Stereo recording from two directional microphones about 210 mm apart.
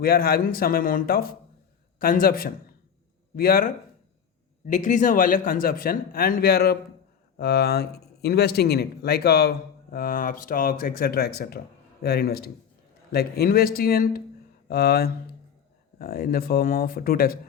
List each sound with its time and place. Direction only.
0.0 s a man's voice: 45° left (ahead or behind)